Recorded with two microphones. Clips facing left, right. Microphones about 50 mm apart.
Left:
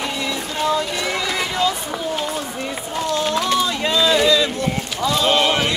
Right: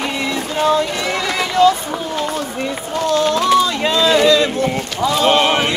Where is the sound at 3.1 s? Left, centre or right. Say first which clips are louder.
Right 6 dB; right.